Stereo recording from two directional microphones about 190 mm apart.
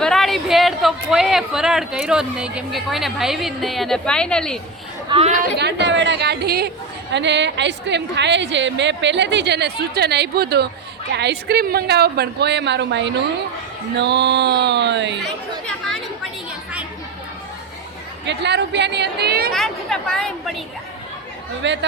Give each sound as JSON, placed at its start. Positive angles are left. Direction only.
{"t": 0.0, "sound": "a man's voice", "side_deg": 0}
{"t": 5.0, "sound": "a woman's voice", "side_deg": -30}
{"t": 5.5, "sound": "a woman's voice", "side_deg": -65}
{"t": 18.3, "sound": "a woman's voice", "side_deg": -65}
{"t": 19.5, "sound": "a man's voice", "side_deg": 5}
{"t": 21.6, "sound": "a woman's voice", "side_deg": -70}